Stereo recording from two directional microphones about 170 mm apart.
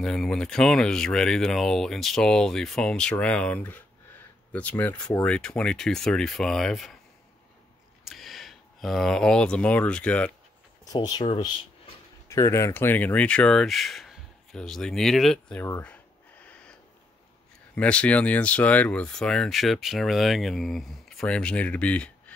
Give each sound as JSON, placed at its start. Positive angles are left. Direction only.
{"t": 0.0, "sound": "speech", "side_deg": 5}
{"t": 8.0, "sound": "speech", "side_deg": 0}
{"t": 10.9, "sound": "speech", "side_deg": 25}
{"t": 12.3, "sound": "speech", "side_deg": 15}
{"t": 17.7, "sound": "speech", "side_deg": 5}